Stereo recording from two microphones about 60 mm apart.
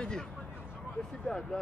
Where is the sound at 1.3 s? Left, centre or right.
Centre.